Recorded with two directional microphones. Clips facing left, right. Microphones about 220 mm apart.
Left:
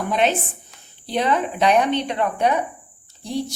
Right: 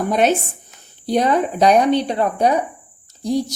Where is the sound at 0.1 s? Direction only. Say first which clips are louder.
Right 3 dB; 45° right (ahead or behind).